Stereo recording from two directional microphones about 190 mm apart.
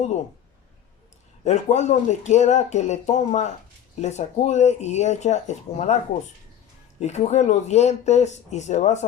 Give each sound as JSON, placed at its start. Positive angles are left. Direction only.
{"t": 1.5, "sound": "speech", "side_deg": 35}
{"t": 7.0, "sound": "speech", "side_deg": 35}